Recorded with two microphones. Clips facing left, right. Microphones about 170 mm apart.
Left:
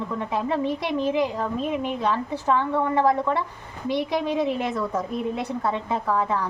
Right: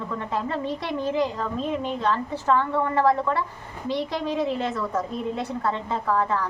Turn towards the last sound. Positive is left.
turn(degrees=15)  # may be behind; listen again after turning